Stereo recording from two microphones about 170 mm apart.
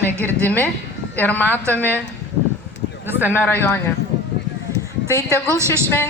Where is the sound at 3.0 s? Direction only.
10° right (ahead or behind).